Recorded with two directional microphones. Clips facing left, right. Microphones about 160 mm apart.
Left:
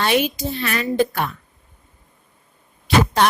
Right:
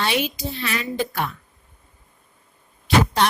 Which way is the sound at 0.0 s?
50° left (ahead or behind).